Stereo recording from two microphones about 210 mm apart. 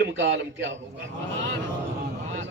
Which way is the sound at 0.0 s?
55° right (ahead or behind).